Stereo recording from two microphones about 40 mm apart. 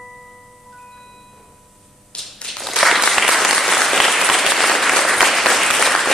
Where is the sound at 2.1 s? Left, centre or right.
Left.